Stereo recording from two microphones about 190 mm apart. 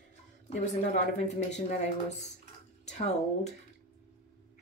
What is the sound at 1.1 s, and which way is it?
Speech, 40° left (ahead or behind).